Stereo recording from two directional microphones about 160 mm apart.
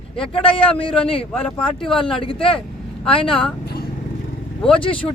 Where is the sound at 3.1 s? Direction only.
35° left (ahead or behind).